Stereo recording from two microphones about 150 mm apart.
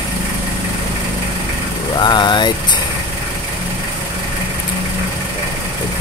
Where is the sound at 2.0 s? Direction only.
30° left (ahead or behind).